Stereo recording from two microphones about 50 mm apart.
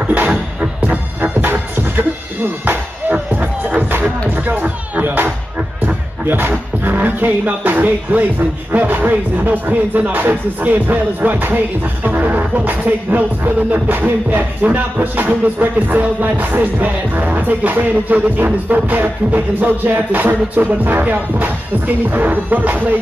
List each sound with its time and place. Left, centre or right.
0.0 s music: right
2.6 s music: right
6.2 s speech: right